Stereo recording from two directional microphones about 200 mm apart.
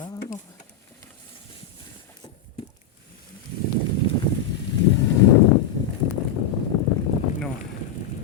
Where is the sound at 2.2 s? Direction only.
20° left (ahead or behind).